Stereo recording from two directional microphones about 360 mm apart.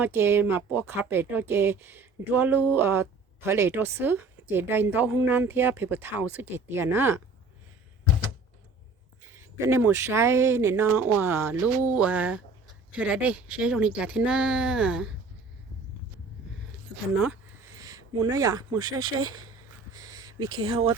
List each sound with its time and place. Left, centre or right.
0.0 s speech: centre
9.2 s speech: centre
17.2 s a sound: centre
19.0 s speech: right
19.9 s a sound: centre
20.7 s speech: centre